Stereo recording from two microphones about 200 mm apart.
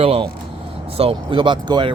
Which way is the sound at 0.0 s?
30° right (ahead or behind).